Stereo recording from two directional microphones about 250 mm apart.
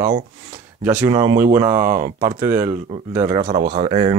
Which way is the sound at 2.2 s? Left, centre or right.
Centre.